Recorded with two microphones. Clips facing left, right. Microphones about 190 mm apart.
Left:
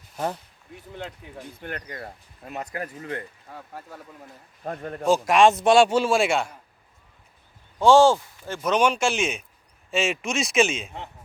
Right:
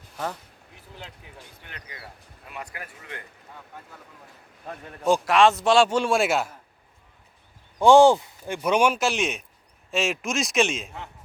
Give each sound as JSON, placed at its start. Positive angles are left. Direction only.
{"t": 1.6, "sound": "speech", "side_deg": 50}
{"t": 4.6, "sound": "speech", "side_deg": 50}
{"t": 5.2, "sound": "a man's voice", "side_deg": 15}
{"t": 7.8, "sound": "a man's voice", "side_deg": -15}